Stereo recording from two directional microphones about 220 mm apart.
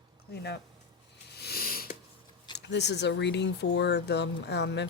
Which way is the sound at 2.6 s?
50° left (ahead or behind).